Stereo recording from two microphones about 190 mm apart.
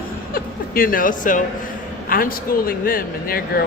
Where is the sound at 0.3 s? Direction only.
50° left (ahead or behind).